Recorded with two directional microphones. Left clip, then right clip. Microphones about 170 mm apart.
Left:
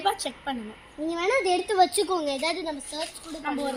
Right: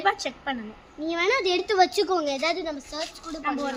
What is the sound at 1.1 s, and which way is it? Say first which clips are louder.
Speech: right 1 dB; 60° left (ahead or behind).